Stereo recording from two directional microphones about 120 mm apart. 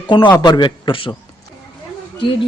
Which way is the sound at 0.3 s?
35° left (ahead or behind).